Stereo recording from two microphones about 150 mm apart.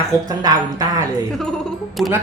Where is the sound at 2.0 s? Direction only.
Centre (ahead or behind).